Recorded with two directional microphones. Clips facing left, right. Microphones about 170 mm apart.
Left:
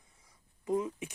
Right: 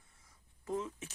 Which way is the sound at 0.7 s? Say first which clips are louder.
Left 6 dB; 15° left (ahead or behind).